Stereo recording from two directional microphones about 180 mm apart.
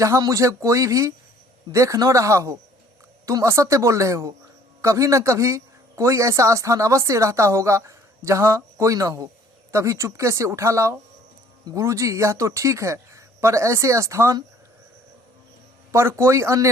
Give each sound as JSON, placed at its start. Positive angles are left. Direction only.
{"t": 0.0, "sound": "speech", "side_deg": -20}
{"t": 15.9, "sound": "speech", "side_deg": -15}